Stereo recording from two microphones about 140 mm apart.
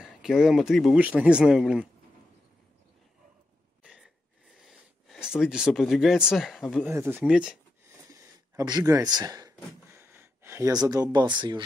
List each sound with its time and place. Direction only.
0.0 s speech: 5° right (ahead or behind)
3.8 s gasp: 10° right (ahead or behind)
4.6 s speech: centre (ahead or behind)
6.8 s speech: 15° right (ahead or behind)
8.1 s a sound: 25° right (ahead or behind)